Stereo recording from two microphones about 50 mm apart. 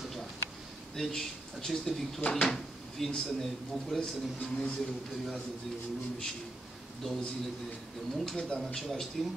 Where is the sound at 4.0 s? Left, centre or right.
Left.